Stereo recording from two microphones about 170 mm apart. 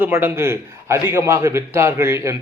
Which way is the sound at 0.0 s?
15° right (ahead or behind).